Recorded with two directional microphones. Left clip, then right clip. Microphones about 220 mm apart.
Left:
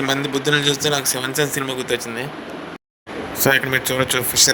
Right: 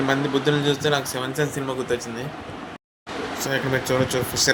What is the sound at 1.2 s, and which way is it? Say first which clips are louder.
Speech: left 4 dB; 45° left (ahead or behind).